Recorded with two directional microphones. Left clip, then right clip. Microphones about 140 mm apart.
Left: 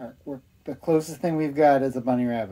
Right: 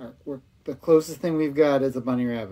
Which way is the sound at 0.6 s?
25° left (ahead or behind).